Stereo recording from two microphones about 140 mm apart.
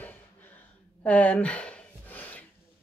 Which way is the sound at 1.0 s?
10° left (ahead or behind).